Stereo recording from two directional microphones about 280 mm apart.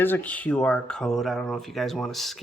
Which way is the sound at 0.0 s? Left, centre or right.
Centre.